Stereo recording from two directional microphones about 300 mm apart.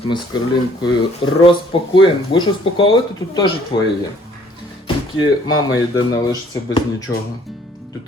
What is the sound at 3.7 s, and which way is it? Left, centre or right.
Speech, centre.